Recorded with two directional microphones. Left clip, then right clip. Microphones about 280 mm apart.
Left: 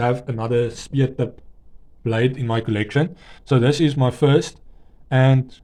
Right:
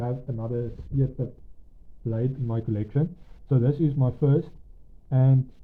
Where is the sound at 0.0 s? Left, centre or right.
Left.